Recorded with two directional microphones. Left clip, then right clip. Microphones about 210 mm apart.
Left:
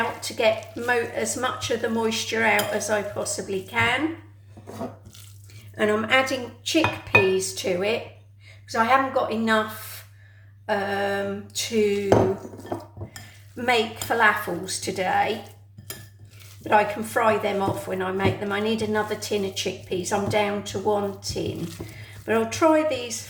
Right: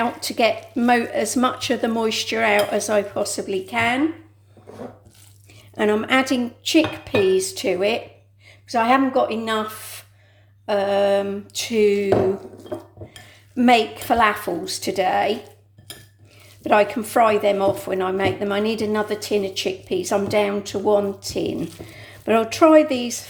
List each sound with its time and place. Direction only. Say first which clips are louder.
0.2 s speech: right 2 dB; 45° right (ahead or behind)
5.7 s speech: right 2 dB; 30° right (ahead or behind)
13.6 s speech: right 6 dB; 40° right (ahead or behind)
16.6 s speech: right 3 dB; 40° right (ahead or behind)